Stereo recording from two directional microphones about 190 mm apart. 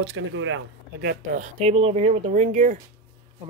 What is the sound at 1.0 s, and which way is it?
Speech, 45° right (ahead or behind).